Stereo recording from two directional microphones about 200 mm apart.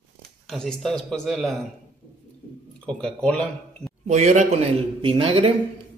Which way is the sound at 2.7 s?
5° left (ahead or behind).